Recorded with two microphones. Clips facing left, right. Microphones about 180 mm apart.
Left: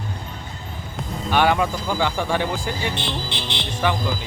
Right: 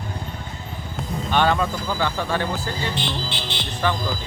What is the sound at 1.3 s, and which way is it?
Speech, 10° left (ahead or behind).